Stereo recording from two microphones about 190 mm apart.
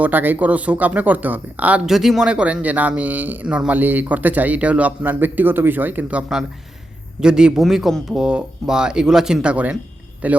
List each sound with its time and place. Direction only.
0.0 s speech: 10° right (ahead or behind)